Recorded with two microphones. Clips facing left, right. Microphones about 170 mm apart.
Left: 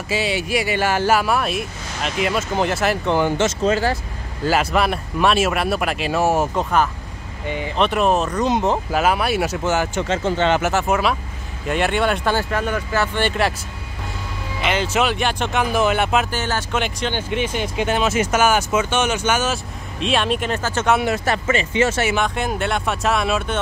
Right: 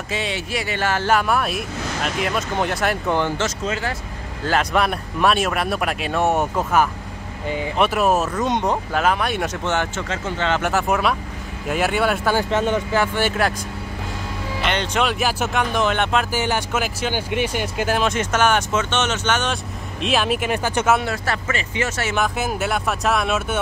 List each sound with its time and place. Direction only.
0.1 s speech: 5° left (ahead or behind)
3.6 s speech: 35° left (ahead or behind)
4.5 s speech: 5° left (ahead or behind)
10.0 s speech: 25° left (ahead or behind)
10.6 s speech: centre (ahead or behind)
12.4 s speech: 25° right (ahead or behind)
13.0 s speech: 5° right (ahead or behind)
14.6 s speech: 5° left (ahead or behind)
15.6 s speech: 5° left (ahead or behind)
16.3 s speech: 10° right (ahead or behind)
21.0 s speech: 20° left (ahead or behind)
22.1 s speech: 5° right (ahead or behind)